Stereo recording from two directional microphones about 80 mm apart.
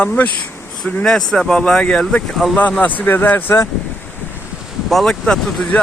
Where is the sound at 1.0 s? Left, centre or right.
Centre; by 3.7 s left.